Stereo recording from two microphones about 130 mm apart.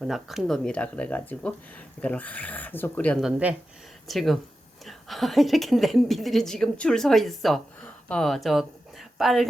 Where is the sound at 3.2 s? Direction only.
5° right (ahead or behind).